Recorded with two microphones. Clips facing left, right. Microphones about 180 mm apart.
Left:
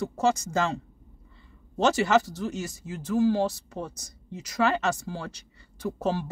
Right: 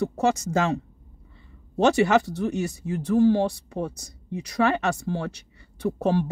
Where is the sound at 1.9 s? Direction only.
60° right (ahead or behind).